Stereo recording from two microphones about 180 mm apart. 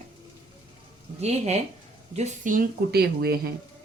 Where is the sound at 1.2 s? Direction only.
40° right (ahead or behind); by 3.4 s 60° right (ahead or behind).